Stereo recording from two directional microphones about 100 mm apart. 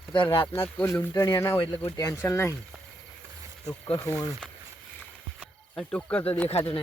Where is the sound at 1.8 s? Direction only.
35° left (ahead or behind).